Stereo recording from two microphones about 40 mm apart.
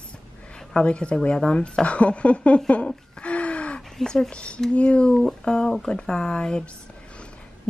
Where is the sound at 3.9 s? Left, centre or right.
Centre.